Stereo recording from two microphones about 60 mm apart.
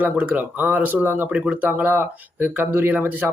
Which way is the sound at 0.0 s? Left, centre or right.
Right.